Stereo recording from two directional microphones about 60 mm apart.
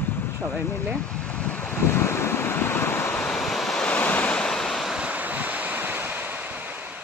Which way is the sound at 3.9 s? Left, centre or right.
Left.